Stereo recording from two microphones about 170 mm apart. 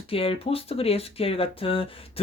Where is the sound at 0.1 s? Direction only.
35° left (ahead or behind).